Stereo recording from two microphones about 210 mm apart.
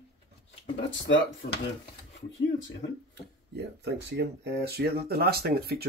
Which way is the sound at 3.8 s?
55° right (ahead or behind).